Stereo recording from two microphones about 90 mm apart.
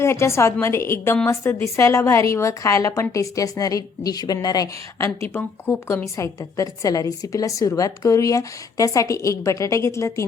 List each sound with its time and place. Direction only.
0.0 s a woman's voice: 30° left (ahead or behind)